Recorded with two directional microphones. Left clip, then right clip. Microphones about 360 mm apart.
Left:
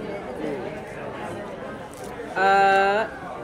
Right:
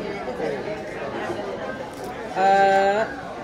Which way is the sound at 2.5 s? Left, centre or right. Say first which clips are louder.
Even; left.